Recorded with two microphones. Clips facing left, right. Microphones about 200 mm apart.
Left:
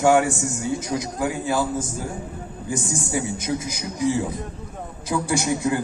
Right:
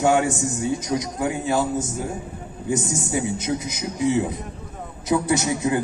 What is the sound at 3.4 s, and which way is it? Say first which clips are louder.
A man's voice: right 1 dB; 25° right (ahead or behind).